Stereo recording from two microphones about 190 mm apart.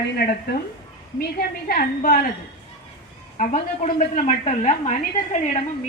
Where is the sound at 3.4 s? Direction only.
40° left (ahead or behind).